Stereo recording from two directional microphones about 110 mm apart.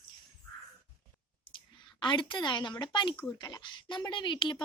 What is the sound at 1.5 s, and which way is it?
A woman's voice, 45° left (ahead or behind).